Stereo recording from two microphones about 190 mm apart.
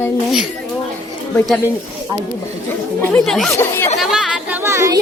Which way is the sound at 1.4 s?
Centre (ahead or behind).